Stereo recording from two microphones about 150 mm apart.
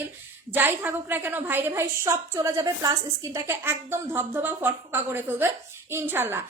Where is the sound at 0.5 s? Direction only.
15° right (ahead or behind).